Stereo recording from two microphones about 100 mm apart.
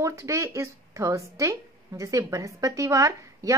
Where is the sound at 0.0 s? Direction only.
30° right (ahead or behind).